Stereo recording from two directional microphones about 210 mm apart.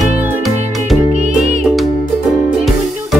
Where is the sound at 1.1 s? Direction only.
35° right (ahead or behind).